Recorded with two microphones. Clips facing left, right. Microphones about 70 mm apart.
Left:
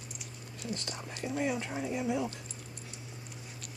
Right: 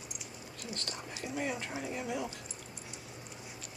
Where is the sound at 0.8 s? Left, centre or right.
Centre.